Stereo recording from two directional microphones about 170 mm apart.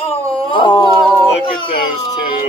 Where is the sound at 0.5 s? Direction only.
25° left (ahead or behind).